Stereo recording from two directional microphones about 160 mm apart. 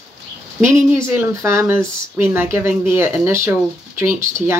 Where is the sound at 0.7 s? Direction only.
15° right (ahead or behind).